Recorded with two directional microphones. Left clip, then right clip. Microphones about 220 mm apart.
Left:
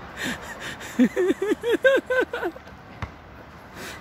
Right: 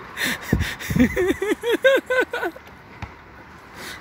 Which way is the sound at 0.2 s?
10° right (ahead or behind).